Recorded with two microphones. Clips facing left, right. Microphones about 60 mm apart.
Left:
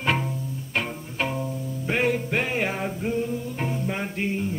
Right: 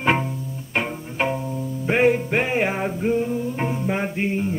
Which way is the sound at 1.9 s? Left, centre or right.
Right.